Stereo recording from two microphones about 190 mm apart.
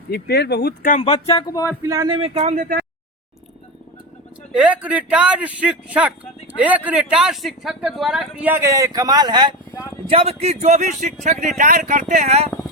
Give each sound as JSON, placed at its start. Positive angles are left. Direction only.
{"t": 0.1, "sound": "speech", "side_deg": 60}
{"t": 1.3, "sound": "speech", "side_deg": 25}
{"t": 1.6, "sound": "a man's voice", "side_deg": -15}
{"t": 4.5, "sound": "speech", "side_deg": -5}